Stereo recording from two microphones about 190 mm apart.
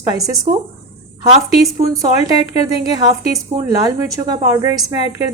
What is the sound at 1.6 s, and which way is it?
A woman's voice, 15° right (ahead or behind).